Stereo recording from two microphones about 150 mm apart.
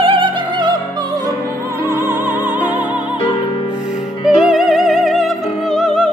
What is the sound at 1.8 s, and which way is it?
Music, 15° right (ahead or behind).